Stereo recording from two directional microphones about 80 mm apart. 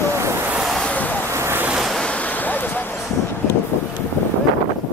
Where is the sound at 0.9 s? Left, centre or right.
Centre.